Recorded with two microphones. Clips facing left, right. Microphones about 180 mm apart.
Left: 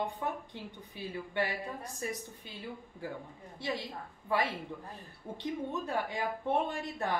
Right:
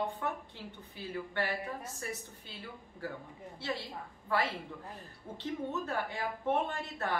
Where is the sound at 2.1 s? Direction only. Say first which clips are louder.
Left 2 dB; 15° left (ahead or behind).